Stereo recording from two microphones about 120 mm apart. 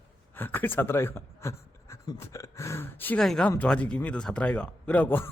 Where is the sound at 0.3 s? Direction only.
15° left (ahead or behind).